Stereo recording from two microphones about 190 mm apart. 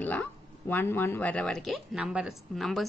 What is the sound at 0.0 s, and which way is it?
A woman's voice, 10° left (ahead or behind).